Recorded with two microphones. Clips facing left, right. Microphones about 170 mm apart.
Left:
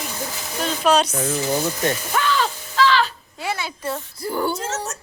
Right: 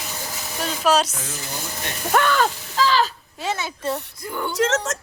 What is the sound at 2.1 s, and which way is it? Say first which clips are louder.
Speech: right 7 dB; 55° right (ahead or behind).